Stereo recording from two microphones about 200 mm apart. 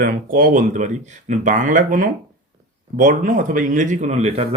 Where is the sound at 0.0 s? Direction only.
45° right (ahead or behind).